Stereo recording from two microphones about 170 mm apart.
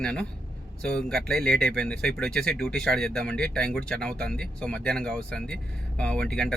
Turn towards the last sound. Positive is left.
turn(degrees=5)  # may be behind; listen again after turning